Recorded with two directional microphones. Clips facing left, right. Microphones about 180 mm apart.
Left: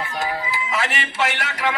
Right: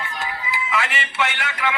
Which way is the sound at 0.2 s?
40° left (ahead or behind).